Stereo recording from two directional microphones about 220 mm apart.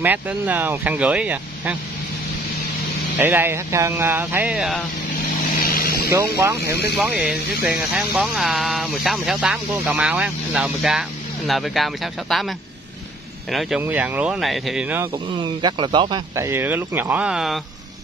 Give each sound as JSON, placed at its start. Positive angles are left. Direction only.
{"t": 0.0, "sound": "speech", "side_deg": -10}
{"t": 3.2, "sound": "speech", "side_deg": -10}
{"t": 5.6, "sound": "vehicle", "side_deg": 40}
{"t": 6.0, "sound": "speech", "side_deg": -10}
{"t": 6.6, "sound": "speech", "side_deg": 45}
{"t": 7.0, "sound": "speech", "side_deg": -5}
{"t": 15.3, "sound": "speech", "side_deg": -20}